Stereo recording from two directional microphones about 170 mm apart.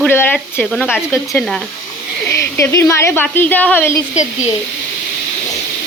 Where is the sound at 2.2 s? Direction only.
15° left (ahead or behind).